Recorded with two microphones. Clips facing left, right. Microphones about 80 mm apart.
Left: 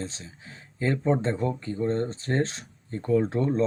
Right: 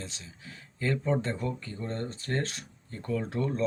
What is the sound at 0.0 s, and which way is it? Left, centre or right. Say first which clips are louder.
Speech: left 7 dB; left.